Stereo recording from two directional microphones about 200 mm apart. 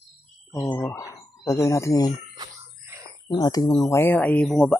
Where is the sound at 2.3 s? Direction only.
15° right (ahead or behind).